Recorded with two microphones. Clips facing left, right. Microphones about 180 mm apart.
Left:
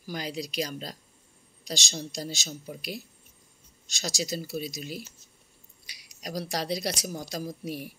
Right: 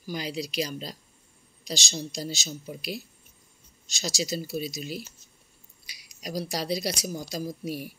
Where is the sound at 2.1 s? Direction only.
45° left (ahead or behind).